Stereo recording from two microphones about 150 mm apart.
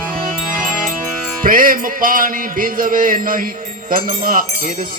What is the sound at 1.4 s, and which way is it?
Speech, 70° right (ahead or behind).